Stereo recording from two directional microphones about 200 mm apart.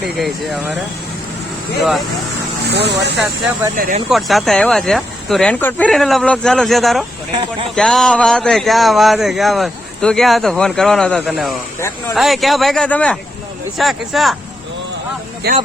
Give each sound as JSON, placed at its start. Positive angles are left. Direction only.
{"t": 0.2, "sound": "speech", "side_deg": 0}
{"t": 2.6, "sound": "speech", "side_deg": -55}
{"t": 3.8, "sound": "speech", "side_deg": -45}
{"t": 4.1, "sound": "speech", "side_deg": 0}
{"t": 15.4, "sound": "speech", "side_deg": -50}